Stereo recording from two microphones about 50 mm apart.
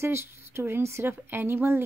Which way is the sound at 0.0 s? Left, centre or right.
Right.